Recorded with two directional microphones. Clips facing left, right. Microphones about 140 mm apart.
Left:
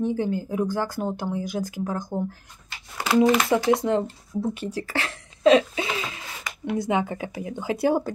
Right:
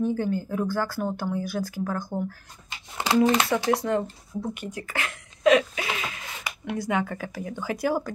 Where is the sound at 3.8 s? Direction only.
20° left (ahead or behind).